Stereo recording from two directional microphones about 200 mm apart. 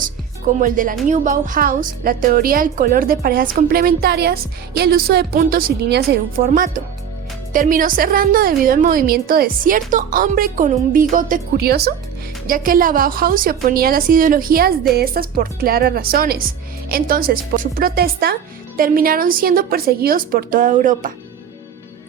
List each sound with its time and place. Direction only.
0.0 s music: 40° right (ahead or behind)
1.0 s a woman's voice: 40° right (ahead or behind)